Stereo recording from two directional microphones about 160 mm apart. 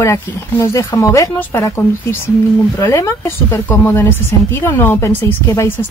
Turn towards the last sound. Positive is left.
turn(degrees=15)  # may be behind; listen again after turning